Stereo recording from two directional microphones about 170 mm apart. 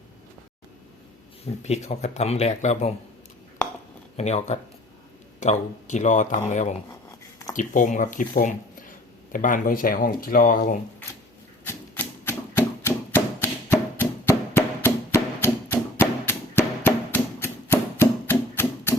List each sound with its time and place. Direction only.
1.6 s speech: 40° left (ahead or behind)
4.2 s speech: 40° left (ahead or behind)
11.6 s a sound: 15° left (ahead or behind)